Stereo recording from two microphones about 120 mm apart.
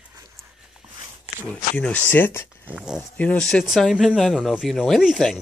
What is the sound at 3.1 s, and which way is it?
Speech, 10° left (ahead or behind).